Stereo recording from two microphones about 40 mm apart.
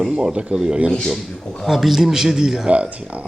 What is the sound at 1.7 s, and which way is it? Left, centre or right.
A man's voice, centre.